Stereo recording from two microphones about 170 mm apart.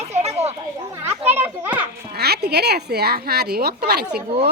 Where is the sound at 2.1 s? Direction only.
70° right (ahead or behind).